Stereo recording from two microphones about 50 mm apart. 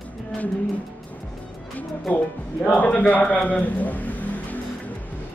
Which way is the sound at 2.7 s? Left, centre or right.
Left.